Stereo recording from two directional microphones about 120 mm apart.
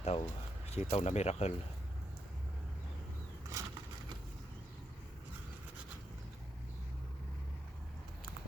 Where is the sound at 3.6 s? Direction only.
25° right (ahead or behind).